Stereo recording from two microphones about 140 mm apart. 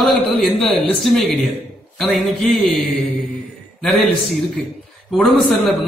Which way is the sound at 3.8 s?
5° left (ahead or behind).